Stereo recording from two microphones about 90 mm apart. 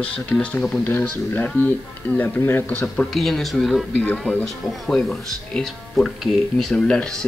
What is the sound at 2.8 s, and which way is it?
Speech, 5° left (ahead or behind).